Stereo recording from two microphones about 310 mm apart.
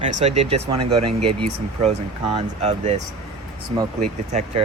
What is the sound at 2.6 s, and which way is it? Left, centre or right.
Speech, right.